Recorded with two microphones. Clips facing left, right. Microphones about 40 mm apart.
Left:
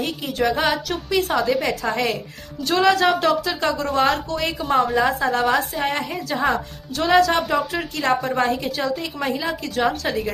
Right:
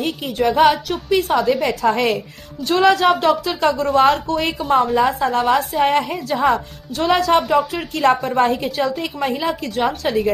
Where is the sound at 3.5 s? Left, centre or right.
Right.